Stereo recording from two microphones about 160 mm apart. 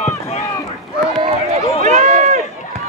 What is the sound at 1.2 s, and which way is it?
Run, 45° right (ahead or behind).